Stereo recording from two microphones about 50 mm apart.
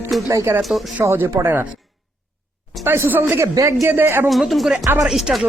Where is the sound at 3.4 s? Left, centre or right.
Right.